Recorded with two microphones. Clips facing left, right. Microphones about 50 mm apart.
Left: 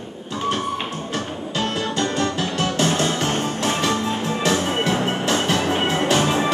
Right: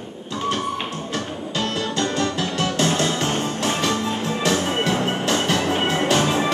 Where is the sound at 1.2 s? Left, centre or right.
Centre.